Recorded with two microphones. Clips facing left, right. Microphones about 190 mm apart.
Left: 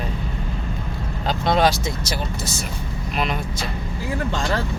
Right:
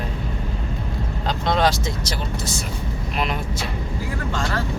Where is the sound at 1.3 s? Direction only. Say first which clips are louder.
Left 2 dB; 10° left (ahead or behind).